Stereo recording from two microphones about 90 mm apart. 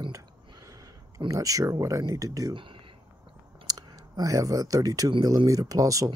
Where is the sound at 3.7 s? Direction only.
45° right (ahead or behind).